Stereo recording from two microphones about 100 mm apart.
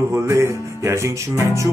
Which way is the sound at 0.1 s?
30° right (ahead or behind).